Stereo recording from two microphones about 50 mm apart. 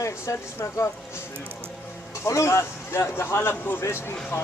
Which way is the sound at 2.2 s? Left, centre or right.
Left.